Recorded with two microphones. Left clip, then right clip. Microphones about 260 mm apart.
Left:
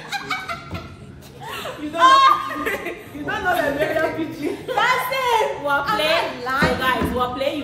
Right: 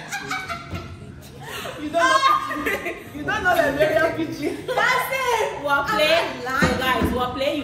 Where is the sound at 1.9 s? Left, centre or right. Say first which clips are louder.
Left 5 dB; left.